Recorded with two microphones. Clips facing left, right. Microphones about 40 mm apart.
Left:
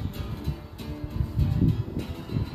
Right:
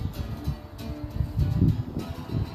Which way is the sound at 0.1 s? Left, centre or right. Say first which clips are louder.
Even; left.